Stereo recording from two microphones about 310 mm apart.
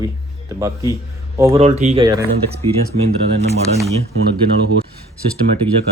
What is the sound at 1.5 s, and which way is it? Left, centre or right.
Speech, right.